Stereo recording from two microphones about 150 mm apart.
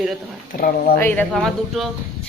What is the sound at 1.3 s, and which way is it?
Speech, centre (ahead or behind).